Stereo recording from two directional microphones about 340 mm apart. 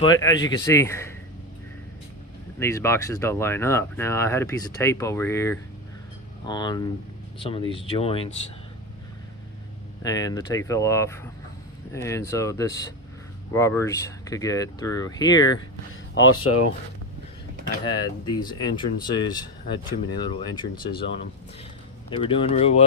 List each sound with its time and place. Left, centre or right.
0.0 s speech: centre
2.6 s speech: centre
10.0 s speech: centre
15.9 s speech: left
18.3 s speech: centre